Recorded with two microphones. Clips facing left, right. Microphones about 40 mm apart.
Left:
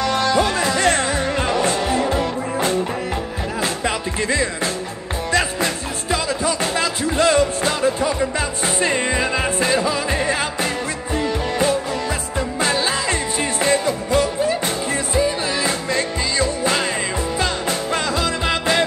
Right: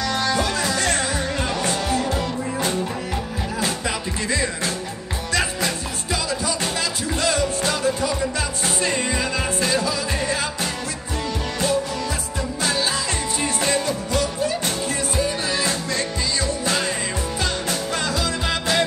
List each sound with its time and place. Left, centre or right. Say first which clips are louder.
0.0 s music: left 4 dB; left
3.8 s music: left 4 dB; left
12.4 s music: left 4 dB; left
15.9 s music: left 3 dB; left